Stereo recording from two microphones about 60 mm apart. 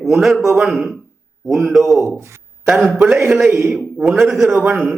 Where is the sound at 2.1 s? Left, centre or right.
Right.